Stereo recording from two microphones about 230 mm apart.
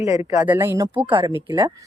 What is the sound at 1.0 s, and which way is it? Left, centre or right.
Speech, right.